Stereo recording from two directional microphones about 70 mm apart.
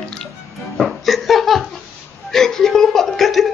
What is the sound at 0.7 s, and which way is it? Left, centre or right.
Laughter, centre.